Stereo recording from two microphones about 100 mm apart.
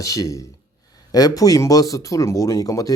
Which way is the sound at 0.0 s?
35° left (ahead or behind).